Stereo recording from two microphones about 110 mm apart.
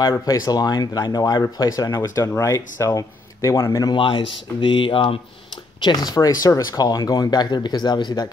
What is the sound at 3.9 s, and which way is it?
Speech, 50° left (ahead or behind).